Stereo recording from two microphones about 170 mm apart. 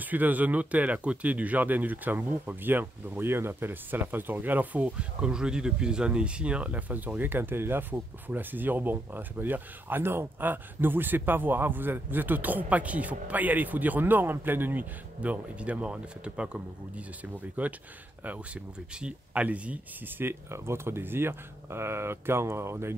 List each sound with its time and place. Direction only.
0.0 s speech: 10° right (ahead or behind)